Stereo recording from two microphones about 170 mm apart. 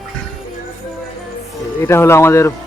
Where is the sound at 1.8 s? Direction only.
15° left (ahead or behind).